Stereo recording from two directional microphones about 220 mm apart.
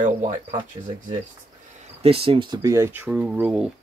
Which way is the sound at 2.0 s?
25° right (ahead or behind).